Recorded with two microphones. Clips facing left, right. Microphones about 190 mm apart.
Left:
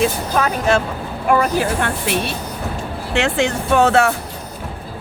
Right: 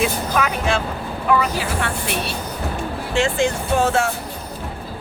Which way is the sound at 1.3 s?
50° left (ahead or behind).